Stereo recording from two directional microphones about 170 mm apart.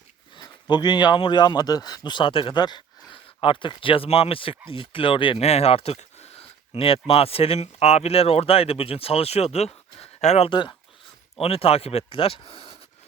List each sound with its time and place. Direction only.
0.3 s speech: 25° left (ahead or behind)